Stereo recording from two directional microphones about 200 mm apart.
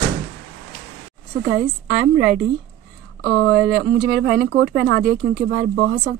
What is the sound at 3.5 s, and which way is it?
Speech, 70° right (ahead or behind).